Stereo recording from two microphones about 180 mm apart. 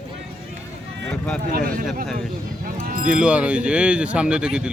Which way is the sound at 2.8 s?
50° right (ahead or behind).